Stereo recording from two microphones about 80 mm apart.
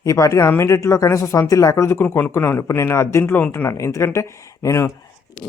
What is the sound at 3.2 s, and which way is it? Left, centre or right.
Speech, left.